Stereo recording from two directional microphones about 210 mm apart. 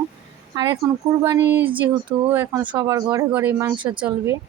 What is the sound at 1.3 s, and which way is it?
Speech, 55° right (ahead or behind).